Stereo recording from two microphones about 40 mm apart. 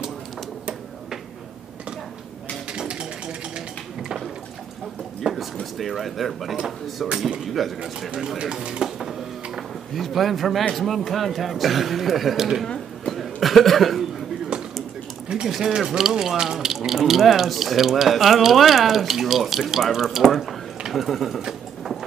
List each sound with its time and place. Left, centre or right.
2.7 s typewriter: right
5.2 s speech: centre
8.8 s a sound: right
9.9 s speech: centre
12.6 s a sound: centre
13.1 s chuckle: centre
15.4 s speech: centre